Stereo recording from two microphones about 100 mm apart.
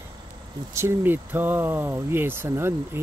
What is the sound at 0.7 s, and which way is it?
Speech, 25° right (ahead or behind).